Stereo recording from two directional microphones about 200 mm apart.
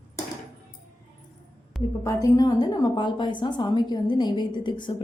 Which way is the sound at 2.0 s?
15° left (ahead or behind).